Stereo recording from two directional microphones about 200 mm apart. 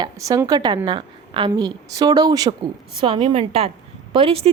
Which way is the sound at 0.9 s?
25° right (ahead or behind).